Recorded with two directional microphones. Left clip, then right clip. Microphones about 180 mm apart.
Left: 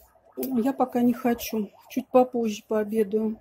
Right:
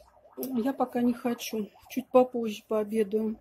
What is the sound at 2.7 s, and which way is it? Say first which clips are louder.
Speech: left 2 dB; centre (ahead or behind).